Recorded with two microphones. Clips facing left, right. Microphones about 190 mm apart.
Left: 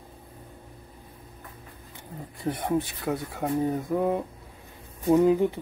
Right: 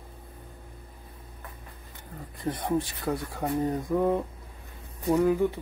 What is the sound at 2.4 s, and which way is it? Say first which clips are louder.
Speech: left 1 dB; 5° left (ahead or behind).